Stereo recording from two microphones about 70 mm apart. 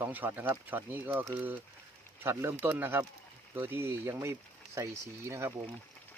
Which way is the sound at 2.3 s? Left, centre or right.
Right.